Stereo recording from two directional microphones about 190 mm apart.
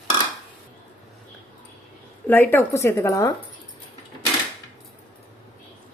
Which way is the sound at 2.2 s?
10° left (ahead or behind).